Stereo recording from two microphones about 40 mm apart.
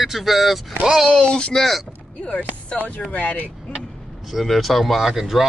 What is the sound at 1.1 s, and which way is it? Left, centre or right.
Speech, left.